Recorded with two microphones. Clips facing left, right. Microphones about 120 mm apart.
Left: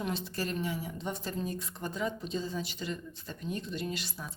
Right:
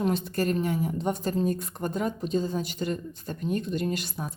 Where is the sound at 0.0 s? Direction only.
50° right (ahead or behind).